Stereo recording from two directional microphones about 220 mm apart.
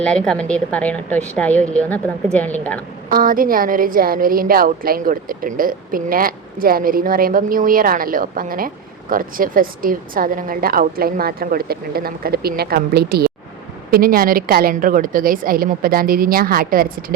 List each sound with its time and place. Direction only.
0.0 s a woman's voice: 5° left (ahead or behind)
3.1 s a woman's voice: 40° right (ahead or behind)